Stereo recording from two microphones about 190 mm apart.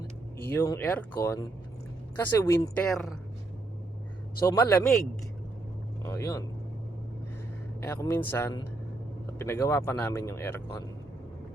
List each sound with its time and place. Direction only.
0.4 s speech: 15° left (ahead or behind)
2.8 s speech: 5° left (ahead or behind)
4.4 s speech: 15° left (ahead or behind)
6.1 s speech: 15° left (ahead or behind)
7.8 s speech: 10° left (ahead or behind)